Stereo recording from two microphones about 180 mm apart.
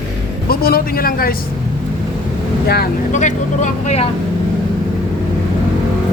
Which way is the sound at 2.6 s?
60° left (ahead or behind).